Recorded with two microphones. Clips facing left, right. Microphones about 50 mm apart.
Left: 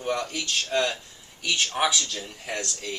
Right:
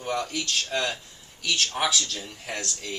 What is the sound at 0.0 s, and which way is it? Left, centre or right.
Speech, centre.